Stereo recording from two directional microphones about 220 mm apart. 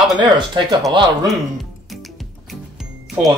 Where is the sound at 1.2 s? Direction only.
Centre (ahead or behind).